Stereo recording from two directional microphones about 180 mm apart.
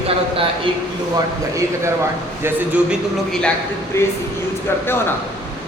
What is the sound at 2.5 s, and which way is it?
Speech, 10° right (ahead or behind).